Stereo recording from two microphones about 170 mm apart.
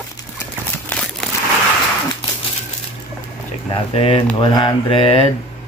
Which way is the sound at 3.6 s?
35° left (ahead or behind).